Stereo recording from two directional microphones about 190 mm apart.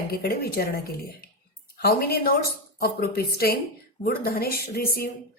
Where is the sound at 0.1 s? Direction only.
55° left (ahead or behind).